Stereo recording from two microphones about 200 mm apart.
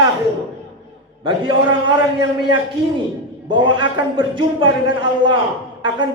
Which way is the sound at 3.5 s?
25° right (ahead or behind).